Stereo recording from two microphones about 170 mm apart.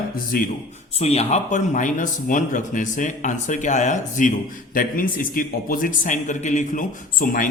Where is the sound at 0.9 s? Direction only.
40° left (ahead or behind).